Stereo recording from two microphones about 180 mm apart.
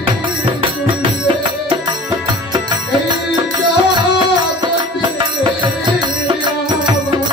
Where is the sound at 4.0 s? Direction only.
25° right (ahead or behind).